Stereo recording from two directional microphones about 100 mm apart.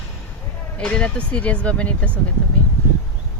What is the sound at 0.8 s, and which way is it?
Speech, 10° left (ahead or behind).